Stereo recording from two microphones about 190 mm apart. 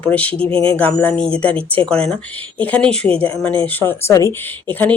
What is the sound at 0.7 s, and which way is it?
Speech, 10° left (ahead or behind).